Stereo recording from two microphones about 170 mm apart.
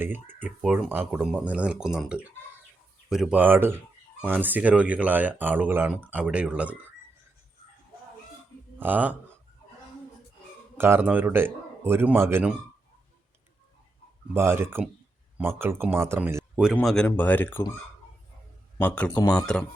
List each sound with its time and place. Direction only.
0.0 s speech: 10° right (ahead or behind)
8.8 s speech: 10° right (ahead or behind)
10.8 s speech: 15° right (ahead or behind)
14.3 s speech: 15° right (ahead or behind)
16.8 s speech: 5° left (ahead or behind)
18.8 s speech: 10° left (ahead or behind)
19.1 s speech: 20° left (ahead or behind)